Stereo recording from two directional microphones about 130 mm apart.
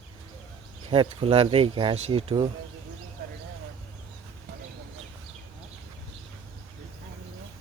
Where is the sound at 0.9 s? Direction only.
45° right (ahead or behind).